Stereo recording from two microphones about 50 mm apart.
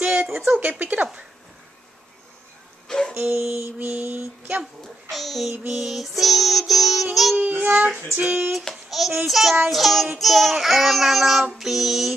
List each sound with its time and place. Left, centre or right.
0.0 s a sound: right
0.5 s speech: right
2.9 s music: centre
3.2 s dog: right
5.1 s child singing: centre
7.3 s speech: right
8.9 s child singing: centre